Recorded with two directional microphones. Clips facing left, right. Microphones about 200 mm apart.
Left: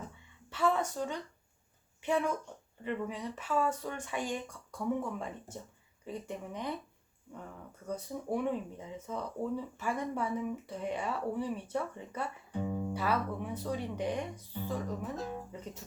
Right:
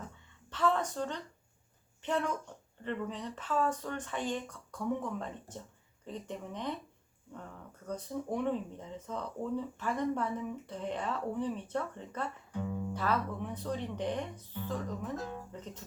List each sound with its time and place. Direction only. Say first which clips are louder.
0.5 s speech: even; 10° left (ahead or behind)
7.9 s speech: even; 10° left (ahead or behind)